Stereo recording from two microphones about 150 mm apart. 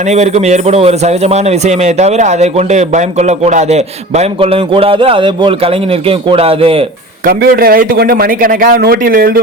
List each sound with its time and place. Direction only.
0.0 s speech: 45° right (ahead or behind)
7.3 s a man's voice: 85° right